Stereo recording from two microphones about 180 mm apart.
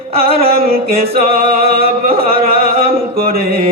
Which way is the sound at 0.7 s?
55° right (ahead or behind).